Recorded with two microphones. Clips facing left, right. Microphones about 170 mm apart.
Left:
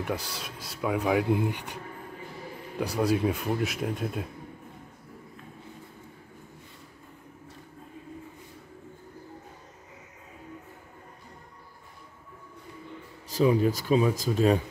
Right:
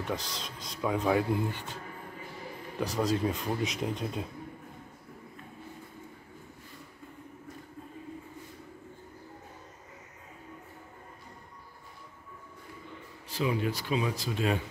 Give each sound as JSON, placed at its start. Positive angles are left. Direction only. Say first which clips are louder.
{"t": 0.0, "sound": "speech", "louder": "left 2 dB", "side_deg": 10}
{"t": 2.8, "sound": "speech", "louder": "left 3 dB", "side_deg": 10}
{"t": 13.3, "sound": "speech", "louder": "left 7 dB", "side_deg": 40}